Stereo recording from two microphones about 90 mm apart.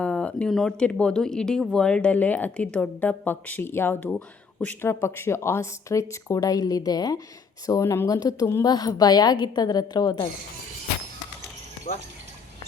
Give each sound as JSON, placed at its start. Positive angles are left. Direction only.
{"t": 0.0, "sound": "a sound", "side_deg": 15}
{"t": 0.5, "sound": "speech", "side_deg": 10}
{"t": 4.9, "sound": "a woman's voice", "side_deg": 30}